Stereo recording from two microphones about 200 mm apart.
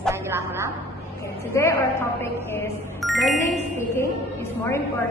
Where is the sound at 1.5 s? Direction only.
15° left (ahead or behind).